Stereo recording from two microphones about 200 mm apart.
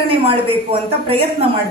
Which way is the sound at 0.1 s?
25° right (ahead or behind).